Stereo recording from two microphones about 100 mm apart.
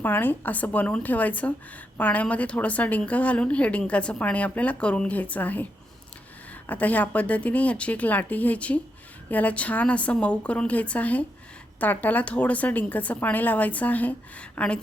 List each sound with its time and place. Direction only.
0.0 s a woman's voice: 20° left (ahead or behind)